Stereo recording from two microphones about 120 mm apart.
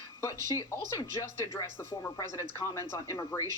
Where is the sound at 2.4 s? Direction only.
20° left (ahead or behind).